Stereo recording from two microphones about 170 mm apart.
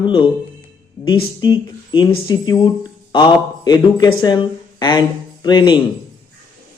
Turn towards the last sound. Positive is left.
turn(degrees=25)  # may be behind; listen again after turning